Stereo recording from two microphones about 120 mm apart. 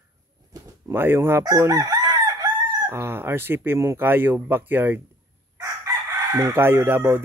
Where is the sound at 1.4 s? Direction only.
25° right (ahead or behind).